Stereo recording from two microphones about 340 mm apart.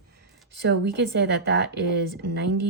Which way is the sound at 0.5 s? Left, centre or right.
Right.